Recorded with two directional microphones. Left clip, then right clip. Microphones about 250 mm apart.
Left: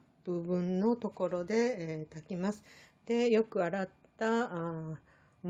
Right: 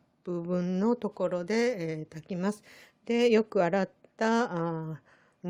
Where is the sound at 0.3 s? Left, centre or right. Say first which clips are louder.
Right 2 dB; right.